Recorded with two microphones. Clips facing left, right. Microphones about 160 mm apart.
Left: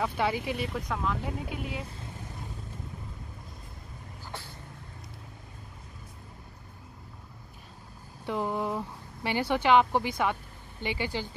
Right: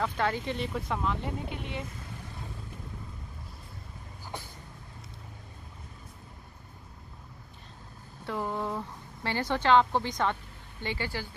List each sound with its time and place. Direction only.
0.0 s speech: 10° left (ahead or behind)
0.7 s speech: centre (ahead or behind)
8.3 s a woman's voice: 15° left (ahead or behind)